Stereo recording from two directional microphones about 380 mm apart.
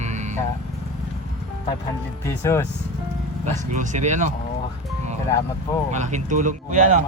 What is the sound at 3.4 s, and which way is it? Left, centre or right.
Speech, centre.